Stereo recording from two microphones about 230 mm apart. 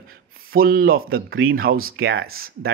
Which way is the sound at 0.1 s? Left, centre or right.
Right.